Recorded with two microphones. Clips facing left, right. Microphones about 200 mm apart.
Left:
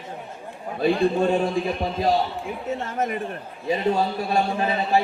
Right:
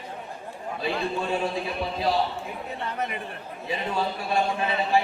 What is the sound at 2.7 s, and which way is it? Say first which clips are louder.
A man's voice: left 6 dB; 45° left (ahead or behind).